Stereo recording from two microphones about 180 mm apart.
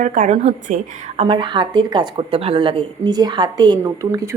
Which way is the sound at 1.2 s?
25° right (ahead or behind).